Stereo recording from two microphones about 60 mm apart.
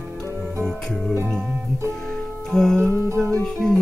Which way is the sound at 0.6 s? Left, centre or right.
Centre.